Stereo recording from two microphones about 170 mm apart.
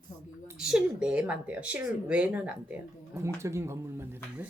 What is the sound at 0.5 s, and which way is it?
Speech, 5° right (ahead or behind).